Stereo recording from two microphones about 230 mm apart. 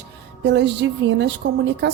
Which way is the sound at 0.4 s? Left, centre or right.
Right.